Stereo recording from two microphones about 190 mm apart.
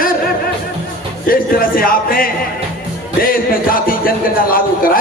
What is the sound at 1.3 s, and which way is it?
A man's voice, 50° left (ahead or behind).